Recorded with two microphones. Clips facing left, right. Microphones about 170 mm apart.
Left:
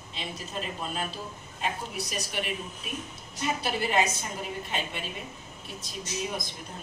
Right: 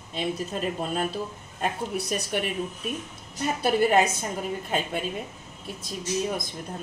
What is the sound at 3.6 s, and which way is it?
Speech, 50° right (ahead or behind).